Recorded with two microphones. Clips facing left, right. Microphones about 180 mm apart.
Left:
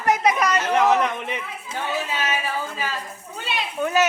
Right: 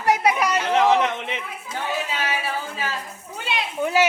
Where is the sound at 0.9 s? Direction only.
20° right (ahead or behind).